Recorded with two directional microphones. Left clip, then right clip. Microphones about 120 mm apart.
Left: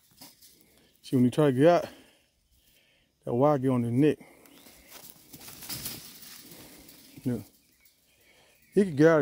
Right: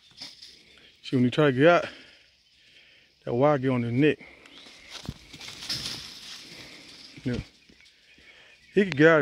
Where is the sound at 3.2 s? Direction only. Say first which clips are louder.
Right 2 dB; 25° left (ahead or behind).